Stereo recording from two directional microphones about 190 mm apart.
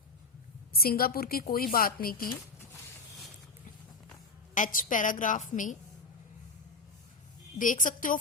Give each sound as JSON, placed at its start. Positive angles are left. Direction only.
{"t": 0.7, "sound": "a woman's voice", "side_deg": 50}
{"t": 4.5, "sound": "a woman's voice", "side_deg": 45}
{"t": 7.6, "sound": "a woman's voice", "side_deg": 45}